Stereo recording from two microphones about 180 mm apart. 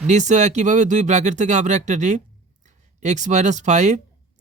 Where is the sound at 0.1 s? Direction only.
40° right (ahead or behind).